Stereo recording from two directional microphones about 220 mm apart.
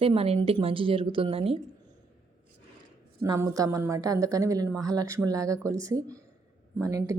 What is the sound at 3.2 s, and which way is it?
A woman's voice, 15° right (ahead or behind).